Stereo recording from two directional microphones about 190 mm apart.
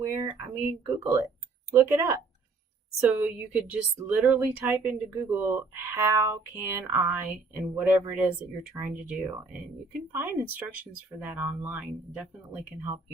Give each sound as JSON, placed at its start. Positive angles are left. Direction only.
{"t": 0.0, "sound": "speech", "side_deg": -10}
{"t": 3.2, "sound": "speech", "side_deg": -5}